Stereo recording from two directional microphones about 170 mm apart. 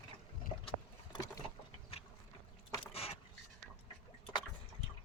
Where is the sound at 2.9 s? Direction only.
35° left (ahead or behind).